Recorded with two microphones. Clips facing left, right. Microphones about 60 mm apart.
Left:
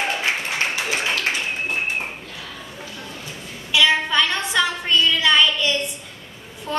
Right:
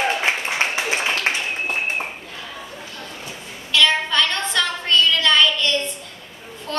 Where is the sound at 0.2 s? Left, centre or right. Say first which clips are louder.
Right 2 dB; right.